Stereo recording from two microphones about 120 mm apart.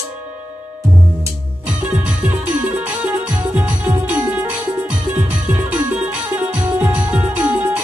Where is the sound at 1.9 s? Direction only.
15° right (ahead or behind).